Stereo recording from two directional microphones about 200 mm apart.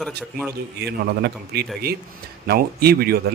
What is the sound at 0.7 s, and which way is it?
Speech, 55° right (ahead or behind).